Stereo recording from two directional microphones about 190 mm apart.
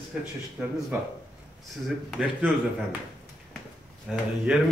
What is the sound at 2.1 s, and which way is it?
Speech, 5° left (ahead or behind).